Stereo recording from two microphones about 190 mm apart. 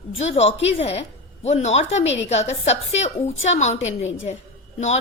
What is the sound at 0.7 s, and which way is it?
A woman's voice, 35° left (ahead or behind).